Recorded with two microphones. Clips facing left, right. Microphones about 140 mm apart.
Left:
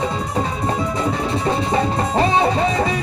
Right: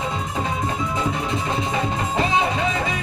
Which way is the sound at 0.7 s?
35° left (ahead or behind).